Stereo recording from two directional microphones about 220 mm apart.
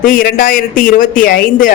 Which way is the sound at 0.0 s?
40° left (ahead or behind).